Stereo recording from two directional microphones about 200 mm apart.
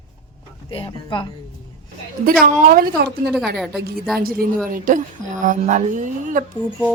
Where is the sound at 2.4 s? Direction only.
45° right (ahead or behind).